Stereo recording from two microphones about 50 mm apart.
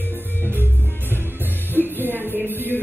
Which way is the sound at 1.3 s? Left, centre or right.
Right.